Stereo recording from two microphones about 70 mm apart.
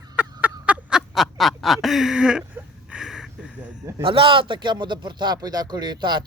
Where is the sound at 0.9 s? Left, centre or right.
Centre.